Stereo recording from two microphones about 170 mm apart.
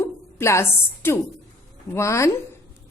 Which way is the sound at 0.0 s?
15° left (ahead or behind).